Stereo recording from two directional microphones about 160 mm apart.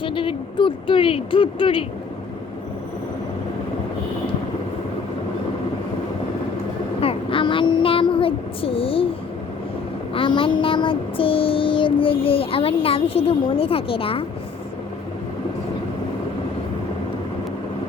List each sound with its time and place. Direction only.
0.0 s child singing: 30° left (ahead or behind)
7.0 s speech: 35° left (ahead or behind)
10.2 s child singing: 30° left (ahead or behind)